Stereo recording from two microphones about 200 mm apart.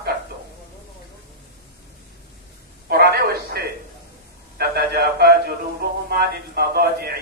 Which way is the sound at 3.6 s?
50° right (ahead or behind).